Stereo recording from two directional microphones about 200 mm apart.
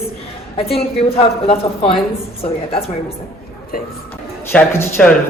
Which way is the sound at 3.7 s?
45° left (ahead or behind).